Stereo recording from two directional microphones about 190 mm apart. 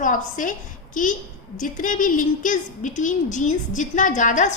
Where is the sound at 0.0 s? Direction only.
45° left (ahead or behind).